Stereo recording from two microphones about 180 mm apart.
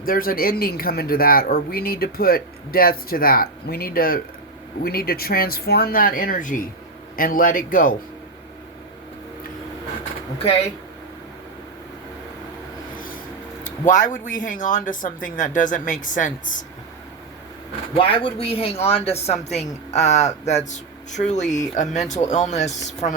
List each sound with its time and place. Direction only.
0.0 s speech: 55° left (ahead or behind)
10.3 s speech: 35° left (ahead or behind)
13.7 s speech: 45° left (ahead or behind)
17.9 s speech: 30° left (ahead or behind)